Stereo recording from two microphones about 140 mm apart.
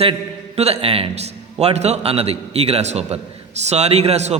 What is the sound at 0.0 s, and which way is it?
A man's voice, 45° right (ahead or behind).